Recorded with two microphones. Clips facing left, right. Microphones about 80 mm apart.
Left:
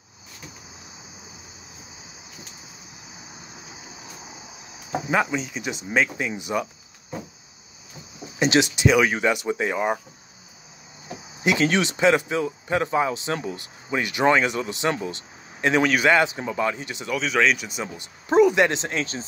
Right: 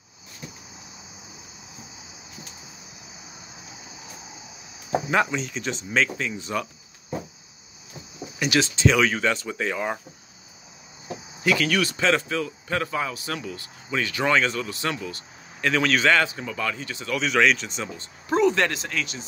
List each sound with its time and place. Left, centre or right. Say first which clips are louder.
5.1 s speech: left 2 dB; centre
8.4 s speech: left 3 dB; left
11.4 s speech: left 2 dB; left
17.1 s speech: even; centre; by 19.2 s left